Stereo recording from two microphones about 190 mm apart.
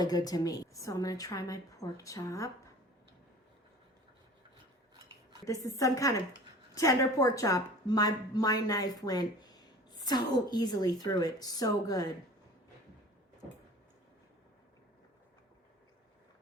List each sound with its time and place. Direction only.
0.0 s a woman's voice: 20° left (ahead or behind)
5.5 s a woman's voice: 15° left (ahead or behind)